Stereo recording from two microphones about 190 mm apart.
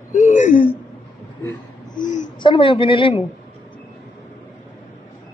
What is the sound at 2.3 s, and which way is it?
Speech, 25° left (ahead or behind).